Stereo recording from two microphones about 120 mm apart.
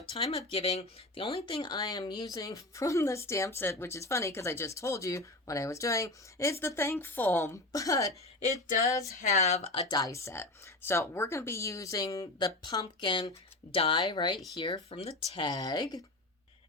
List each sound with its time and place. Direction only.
0.0 s speech: 50° left (ahead or behind)
1.6 s speech: 35° left (ahead or behind)
8.6 s music: 90° left
8.9 s speech: 25° left (ahead or behind)
9.2 s speech: 65° left (ahead or behind)
9.9 s speech: 30° left (ahead or behind)
14.8 s speech: 60° left (ahead or behind)
15.4 s speech: 35° left (ahead or behind)